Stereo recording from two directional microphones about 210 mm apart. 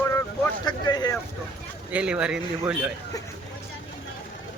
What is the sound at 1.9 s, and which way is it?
Speech, 5° right (ahead or behind).